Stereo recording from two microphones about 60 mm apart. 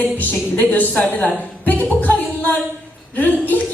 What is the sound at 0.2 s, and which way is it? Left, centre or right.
A woman's voice, left.